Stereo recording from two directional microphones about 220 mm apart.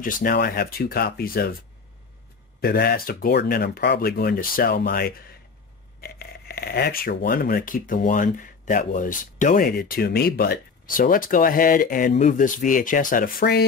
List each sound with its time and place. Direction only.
0.0 s speech: 40° left (ahead or behind)
2.6 s speech: 45° left (ahead or behind)